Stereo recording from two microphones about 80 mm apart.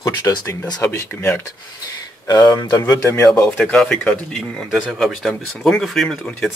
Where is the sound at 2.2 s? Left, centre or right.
Left.